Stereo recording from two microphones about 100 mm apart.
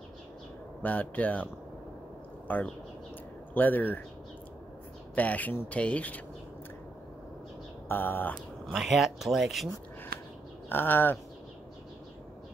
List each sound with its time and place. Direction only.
0.8 s speech: 15° left (ahead or behind)
5.1 s speech: 15° left (ahead or behind)
7.9 s speech: 20° left (ahead or behind)
8.7 s speech: 5° right (ahead or behind)
10.7 s speech: 20° left (ahead or behind)